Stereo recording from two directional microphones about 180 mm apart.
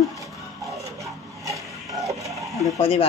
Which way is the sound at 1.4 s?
20° right (ahead or behind).